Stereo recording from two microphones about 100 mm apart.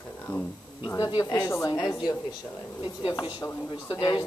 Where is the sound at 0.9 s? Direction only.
40° left (ahead or behind).